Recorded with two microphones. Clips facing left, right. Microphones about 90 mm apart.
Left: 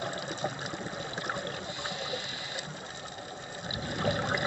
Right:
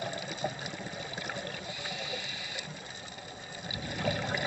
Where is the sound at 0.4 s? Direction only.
25° left (ahead or behind).